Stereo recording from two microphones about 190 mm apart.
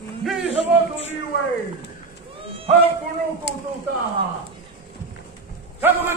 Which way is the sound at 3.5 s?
60° left (ahead or behind).